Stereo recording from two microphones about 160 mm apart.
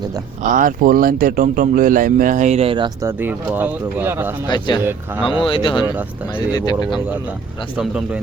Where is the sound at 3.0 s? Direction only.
15° right (ahead or behind).